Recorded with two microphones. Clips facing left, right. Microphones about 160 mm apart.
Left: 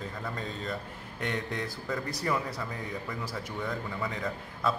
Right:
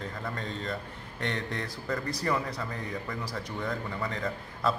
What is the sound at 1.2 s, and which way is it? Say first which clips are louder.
Speech: even; 5° left (ahead or behind).